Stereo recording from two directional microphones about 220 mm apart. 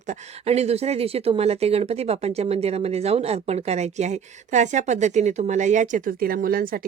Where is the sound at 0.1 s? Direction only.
30° right (ahead or behind).